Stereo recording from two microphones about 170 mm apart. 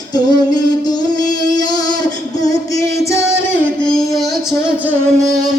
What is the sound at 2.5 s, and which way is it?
Music, 20° left (ahead or behind).